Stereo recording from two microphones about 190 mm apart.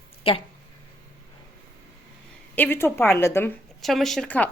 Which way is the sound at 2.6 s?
10° left (ahead or behind).